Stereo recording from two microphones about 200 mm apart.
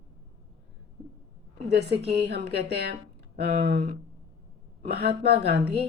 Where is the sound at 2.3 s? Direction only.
55° right (ahead or behind).